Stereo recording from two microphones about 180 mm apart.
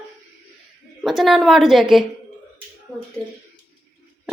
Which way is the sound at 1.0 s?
Centre (ahead or behind).